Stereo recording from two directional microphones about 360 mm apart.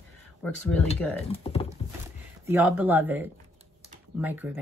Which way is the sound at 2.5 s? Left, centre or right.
Centre.